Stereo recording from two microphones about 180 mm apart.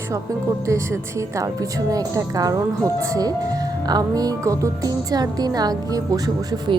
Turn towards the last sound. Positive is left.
turn(degrees=-20)  # may be behind; listen again after turning